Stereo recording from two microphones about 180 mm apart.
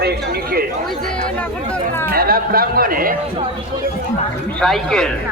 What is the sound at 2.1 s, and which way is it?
A man's voice, 55° right (ahead or behind).